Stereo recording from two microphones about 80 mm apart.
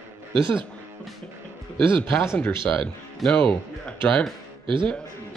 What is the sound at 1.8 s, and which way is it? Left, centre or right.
Speech, right.